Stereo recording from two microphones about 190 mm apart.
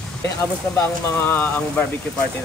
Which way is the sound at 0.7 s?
10° left (ahead or behind).